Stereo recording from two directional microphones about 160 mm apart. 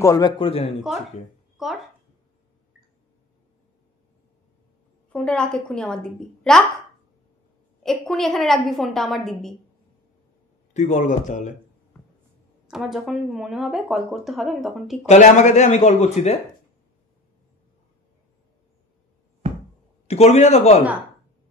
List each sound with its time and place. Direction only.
0.0 s a man's voice: 20° left (ahead or behind)
0.4 s a man's voice: 35° left (ahead or behind)
1.6 s speech: centre (ahead or behind)
5.1 s speech: 5° left (ahead or behind)
7.8 s speech: 5° left (ahead or behind)
10.7 s speech: 45° left (ahead or behind)
12.6 s speech: centre (ahead or behind)
15.0 s speech: 45° left (ahead or behind)
19.4 s a sound: 40° right (ahead or behind)
20.1 s a man's voice: 40° left (ahead or behind)